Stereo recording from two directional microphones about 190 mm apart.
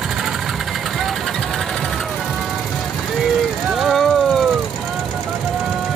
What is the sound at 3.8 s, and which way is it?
Vehicle, centre (ahead or behind).